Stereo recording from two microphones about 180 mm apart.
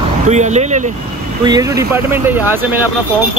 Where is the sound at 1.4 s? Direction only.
20° right (ahead or behind).